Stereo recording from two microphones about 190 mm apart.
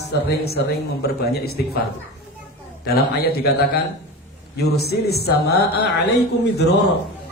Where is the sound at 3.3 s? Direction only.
55° left (ahead or behind).